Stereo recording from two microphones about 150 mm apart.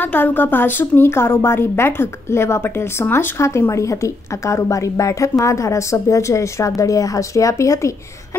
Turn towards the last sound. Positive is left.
turn(degrees=20)  # may be behind; listen again after turning